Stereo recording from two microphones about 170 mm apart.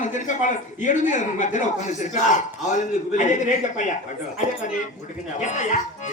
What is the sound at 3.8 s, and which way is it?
Speech, 50° left (ahead or behind).